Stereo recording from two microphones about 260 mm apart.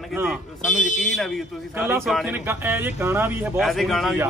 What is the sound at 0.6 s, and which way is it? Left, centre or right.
Speech, left.